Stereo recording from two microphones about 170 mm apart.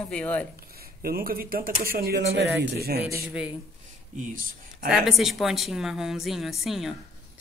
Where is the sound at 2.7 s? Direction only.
70° right (ahead or behind).